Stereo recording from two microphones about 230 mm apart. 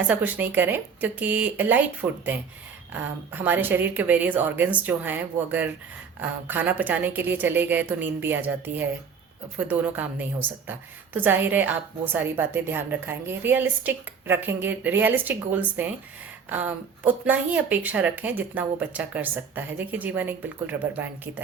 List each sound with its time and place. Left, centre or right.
0.1 s a woman's voice: centre